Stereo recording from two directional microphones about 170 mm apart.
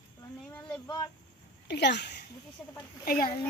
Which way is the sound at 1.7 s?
85° left.